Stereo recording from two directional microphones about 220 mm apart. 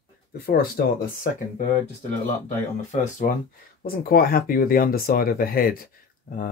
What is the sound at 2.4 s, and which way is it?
Speech, 30° left (ahead or behind).